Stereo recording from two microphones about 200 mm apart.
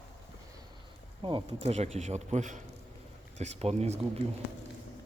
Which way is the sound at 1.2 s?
25° right (ahead or behind).